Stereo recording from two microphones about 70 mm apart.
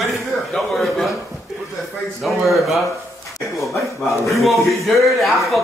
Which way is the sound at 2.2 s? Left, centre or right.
Centre.